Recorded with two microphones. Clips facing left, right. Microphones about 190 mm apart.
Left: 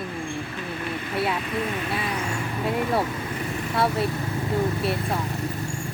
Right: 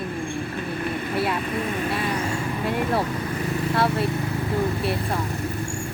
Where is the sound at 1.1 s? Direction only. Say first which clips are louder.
Even; centre (ahead or behind).